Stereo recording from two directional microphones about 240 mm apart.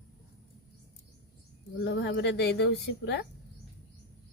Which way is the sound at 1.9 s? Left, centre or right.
Left.